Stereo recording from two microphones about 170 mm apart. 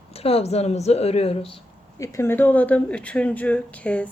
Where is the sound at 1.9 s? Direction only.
15° left (ahead or behind).